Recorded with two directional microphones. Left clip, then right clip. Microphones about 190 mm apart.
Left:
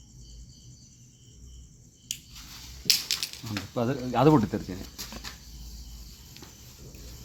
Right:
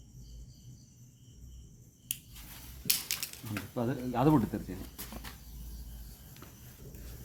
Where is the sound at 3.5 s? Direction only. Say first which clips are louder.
Left 5 dB; 55° left (ahead or behind).